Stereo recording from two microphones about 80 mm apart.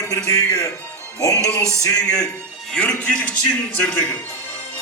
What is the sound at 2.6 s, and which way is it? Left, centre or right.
A man's voice, centre.